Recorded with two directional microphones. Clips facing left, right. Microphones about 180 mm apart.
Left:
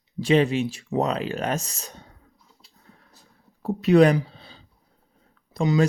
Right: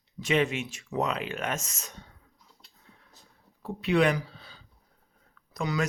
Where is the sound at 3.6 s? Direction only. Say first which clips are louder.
Left 8 dB; 40° left (ahead or behind).